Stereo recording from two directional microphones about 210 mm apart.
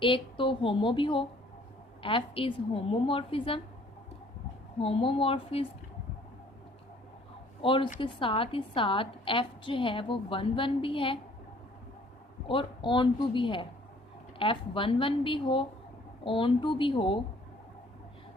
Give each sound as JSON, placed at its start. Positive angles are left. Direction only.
{"t": 0.0, "sound": "a woman's voice", "side_deg": 25}
{"t": 4.8, "sound": "a woman's voice", "side_deg": 25}
{"t": 7.6, "sound": "a woman's voice", "side_deg": 25}
{"t": 12.5, "sound": "a woman's voice", "side_deg": 25}